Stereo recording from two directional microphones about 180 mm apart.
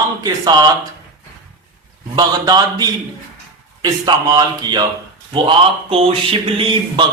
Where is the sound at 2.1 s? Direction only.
20° right (ahead or behind).